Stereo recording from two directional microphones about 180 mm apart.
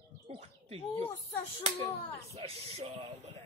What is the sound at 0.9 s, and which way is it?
Speech, 10° left (ahead or behind).